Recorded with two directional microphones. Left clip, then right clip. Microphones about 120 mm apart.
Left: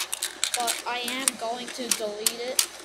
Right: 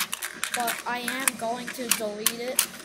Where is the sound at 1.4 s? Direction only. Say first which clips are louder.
Right 1 dB; centre (ahead or behind).